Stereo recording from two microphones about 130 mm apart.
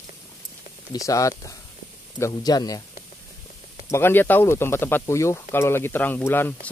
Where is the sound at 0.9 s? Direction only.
25° left (ahead or behind).